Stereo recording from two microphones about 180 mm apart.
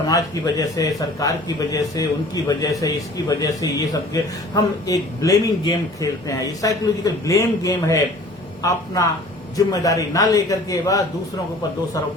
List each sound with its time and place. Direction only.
0.1 s a man's voice: 20° left (ahead or behind)